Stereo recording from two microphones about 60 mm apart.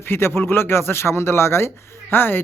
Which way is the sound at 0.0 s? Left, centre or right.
Left.